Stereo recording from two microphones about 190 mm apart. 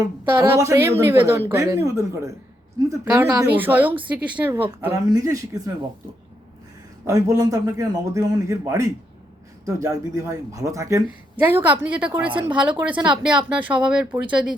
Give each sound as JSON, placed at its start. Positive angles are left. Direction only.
{"t": 0.3, "sound": "a woman's voice", "side_deg": -15}
{"t": 7.1, "sound": "a woman's voice", "side_deg": -20}